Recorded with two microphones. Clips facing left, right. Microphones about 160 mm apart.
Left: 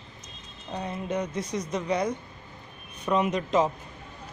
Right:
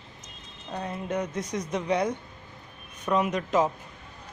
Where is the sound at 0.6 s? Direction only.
5° left (ahead or behind).